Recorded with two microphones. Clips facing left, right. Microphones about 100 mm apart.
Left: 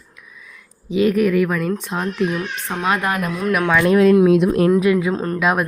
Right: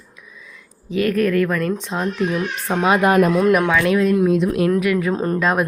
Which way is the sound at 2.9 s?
20° right (ahead or behind).